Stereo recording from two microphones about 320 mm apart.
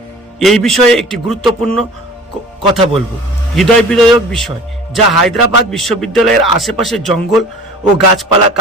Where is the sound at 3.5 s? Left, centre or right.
Centre.